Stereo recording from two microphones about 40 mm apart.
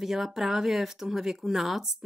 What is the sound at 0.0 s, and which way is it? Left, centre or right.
Speech, centre.